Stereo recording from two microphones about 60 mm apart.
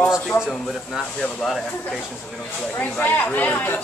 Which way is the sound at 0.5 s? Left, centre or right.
Centre.